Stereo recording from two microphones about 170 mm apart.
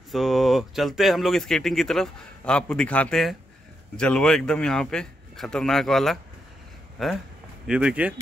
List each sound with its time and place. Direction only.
0.1 s speech: centre (ahead or behind)